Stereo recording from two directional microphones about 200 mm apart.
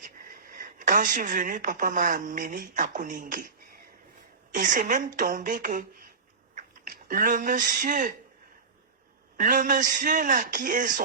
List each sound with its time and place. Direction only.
0.0 s speech: 45° right (ahead or behind)
4.5 s a man's voice: 40° right (ahead or behind)
9.4 s a man's voice: 40° right (ahead or behind)